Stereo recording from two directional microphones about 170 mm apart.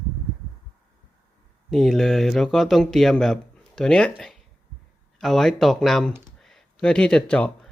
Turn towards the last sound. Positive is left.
turn(degrees=5)  # may be behind; listen again after turning